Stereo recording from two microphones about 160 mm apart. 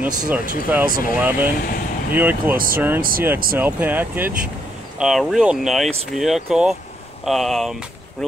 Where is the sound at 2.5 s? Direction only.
65° right (ahead or behind).